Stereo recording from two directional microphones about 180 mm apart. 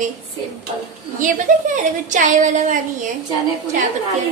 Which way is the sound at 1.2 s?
45° right (ahead or behind).